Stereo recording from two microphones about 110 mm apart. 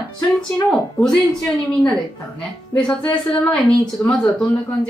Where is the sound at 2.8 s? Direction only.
40° left (ahead or behind).